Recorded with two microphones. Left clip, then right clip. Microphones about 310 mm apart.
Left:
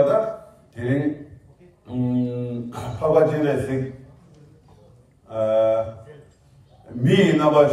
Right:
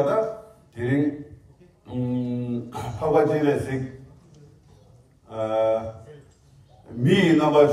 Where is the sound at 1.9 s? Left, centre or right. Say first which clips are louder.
Left 3 dB; centre.